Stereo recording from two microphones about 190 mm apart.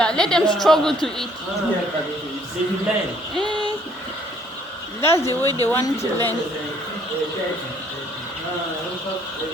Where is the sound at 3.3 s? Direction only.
25° right (ahead or behind).